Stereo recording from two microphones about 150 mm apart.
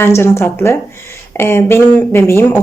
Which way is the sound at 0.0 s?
15° left (ahead or behind).